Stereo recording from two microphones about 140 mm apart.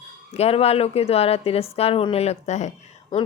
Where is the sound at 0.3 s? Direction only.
45° left (ahead or behind).